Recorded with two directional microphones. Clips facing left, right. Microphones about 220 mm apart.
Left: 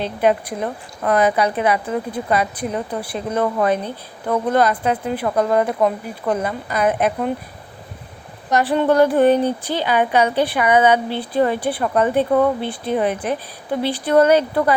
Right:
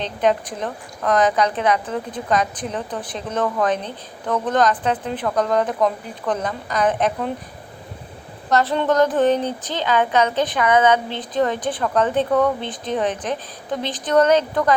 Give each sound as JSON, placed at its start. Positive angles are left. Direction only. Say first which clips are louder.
{"t": 0.0, "sound": "a woman's voice", "louder": "left 2 dB", "side_deg": 10}
{"t": 8.4, "sound": "a woman's voice", "louder": "left 2 dB", "side_deg": 15}